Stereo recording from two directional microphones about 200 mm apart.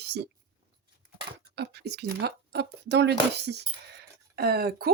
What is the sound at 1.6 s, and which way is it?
Speech, 55° right (ahead or behind).